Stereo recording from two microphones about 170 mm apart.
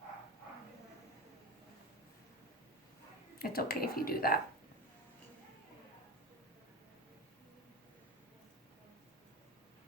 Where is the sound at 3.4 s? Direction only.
60° left (ahead or behind).